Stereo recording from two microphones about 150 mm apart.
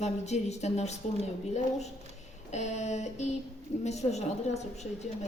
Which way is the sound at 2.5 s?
50° left (ahead or behind).